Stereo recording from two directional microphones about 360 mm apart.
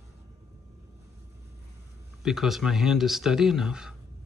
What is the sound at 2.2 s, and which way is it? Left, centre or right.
Speech, centre.